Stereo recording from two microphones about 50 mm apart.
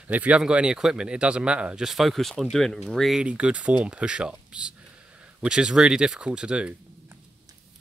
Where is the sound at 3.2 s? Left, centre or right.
Right.